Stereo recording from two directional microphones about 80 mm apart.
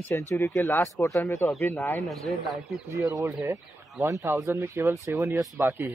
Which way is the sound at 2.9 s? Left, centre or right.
Right.